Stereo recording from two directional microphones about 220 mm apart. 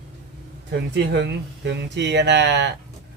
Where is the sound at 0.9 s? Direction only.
50° right (ahead or behind).